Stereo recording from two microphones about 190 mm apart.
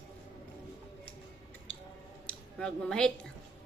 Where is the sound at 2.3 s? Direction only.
5° left (ahead or behind).